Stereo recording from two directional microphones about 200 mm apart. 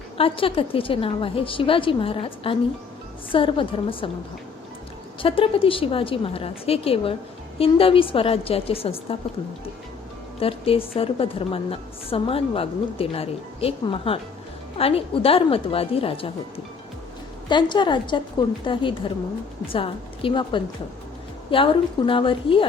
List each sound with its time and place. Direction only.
0.2 s a woman's voice: 25° left (ahead or behind)
5.2 s a woman's voice: 25° left (ahead or behind)
10.4 s a woman's voice: 30° left (ahead or behind)
17.5 s a woman's voice: 25° left (ahead or behind)